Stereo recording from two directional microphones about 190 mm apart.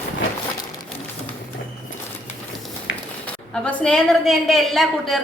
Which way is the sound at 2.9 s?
80° left.